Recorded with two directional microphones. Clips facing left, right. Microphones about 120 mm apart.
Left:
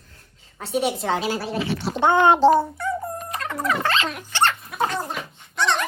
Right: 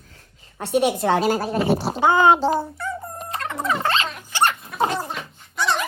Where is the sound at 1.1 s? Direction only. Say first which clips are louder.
Right 4 dB; 45° right (ahead or behind).